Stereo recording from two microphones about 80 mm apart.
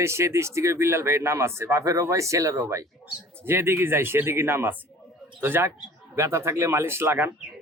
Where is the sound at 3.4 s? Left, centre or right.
Right.